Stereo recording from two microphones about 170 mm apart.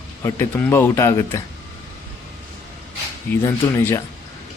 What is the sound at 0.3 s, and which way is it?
Speech, 15° left (ahead or behind).